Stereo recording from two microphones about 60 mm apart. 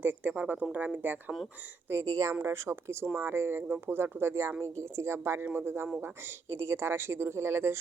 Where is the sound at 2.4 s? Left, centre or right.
Right.